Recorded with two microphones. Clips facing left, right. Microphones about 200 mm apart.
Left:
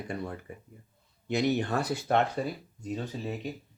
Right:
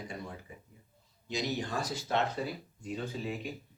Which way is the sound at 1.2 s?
60° left (ahead or behind).